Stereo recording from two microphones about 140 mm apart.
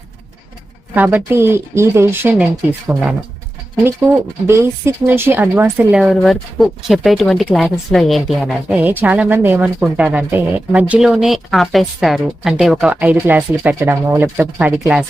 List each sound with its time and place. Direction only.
0.9 s speech: 15° right (ahead or behind)
3.8 s speech: 20° right (ahead or behind); by 8.5 s centre (ahead or behind)
8.7 s speech: 10° right (ahead or behind)